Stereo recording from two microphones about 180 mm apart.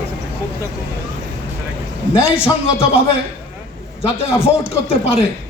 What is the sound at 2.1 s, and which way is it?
Speech, 30° left (ahead or behind).